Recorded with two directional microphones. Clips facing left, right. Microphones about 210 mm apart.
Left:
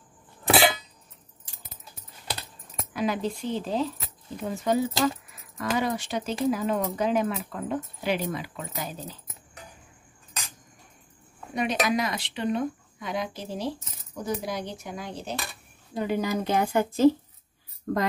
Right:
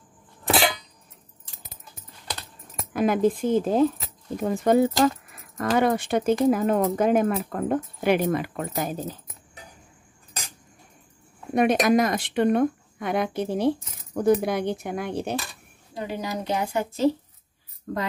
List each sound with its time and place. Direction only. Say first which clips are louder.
0.5 s a sound: left 1 dB; 5° left (ahead or behind)
2.9 s speech: right 7 dB; 50° right (ahead or behind)
11.5 s speech: right 7 dB; 50° right (ahead or behind)
16.2 s a woman's voice: left 1 dB; 50° left (ahead or behind)